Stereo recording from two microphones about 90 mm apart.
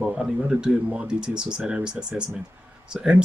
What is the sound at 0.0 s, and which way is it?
Speech, 10° right (ahead or behind).